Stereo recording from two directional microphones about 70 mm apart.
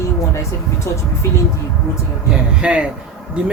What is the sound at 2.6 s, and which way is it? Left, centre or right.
Speech, centre.